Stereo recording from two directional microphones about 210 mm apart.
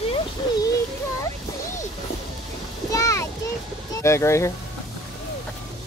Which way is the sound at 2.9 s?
15° left (ahead or behind).